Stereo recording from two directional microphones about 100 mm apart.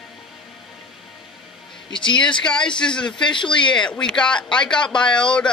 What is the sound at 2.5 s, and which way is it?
Speech, 10° left (ahead or behind).